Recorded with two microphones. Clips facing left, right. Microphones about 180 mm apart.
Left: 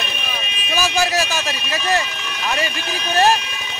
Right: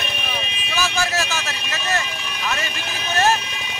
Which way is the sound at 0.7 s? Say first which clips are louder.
Left 4 dB; 15° left (ahead or behind).